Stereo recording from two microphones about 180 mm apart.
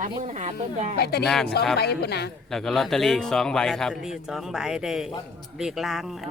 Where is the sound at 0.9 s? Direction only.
65° left (ahead or behind).